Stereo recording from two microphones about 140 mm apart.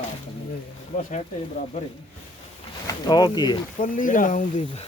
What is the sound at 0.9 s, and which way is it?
Speech, 60° left (ahead or behind).